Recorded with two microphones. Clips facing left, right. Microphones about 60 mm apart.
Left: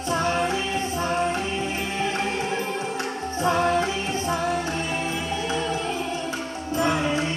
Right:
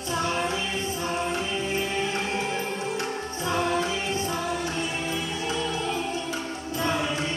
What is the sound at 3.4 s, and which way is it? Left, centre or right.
Music, left.